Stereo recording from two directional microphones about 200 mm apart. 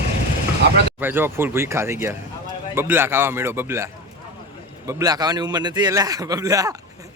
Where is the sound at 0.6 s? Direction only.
60° right (ahead or behind).